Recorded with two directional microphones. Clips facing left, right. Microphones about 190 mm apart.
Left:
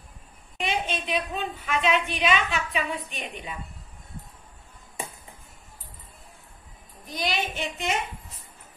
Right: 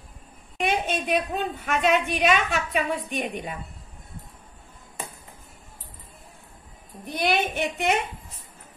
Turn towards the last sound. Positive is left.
turn(degrees=-60)  # may be behind; listen again after turning